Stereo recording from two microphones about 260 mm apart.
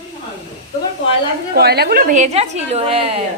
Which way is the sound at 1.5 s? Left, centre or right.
Right.